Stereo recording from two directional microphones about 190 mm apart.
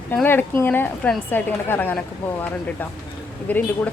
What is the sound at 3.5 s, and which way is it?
Speech, 10° left (ahead or behind).